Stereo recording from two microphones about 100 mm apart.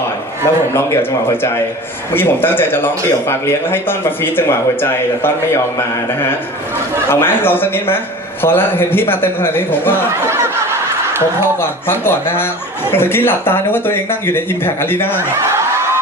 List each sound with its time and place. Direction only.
0.4 s a man's voice: 25° left (ahead or behind)
7.1 s a man's voice: 20° left (ahead or behind)
10.2 s fowl: 25° right (ahead or behind)
11.9 s a man's voice: 20° left (ahead or behind)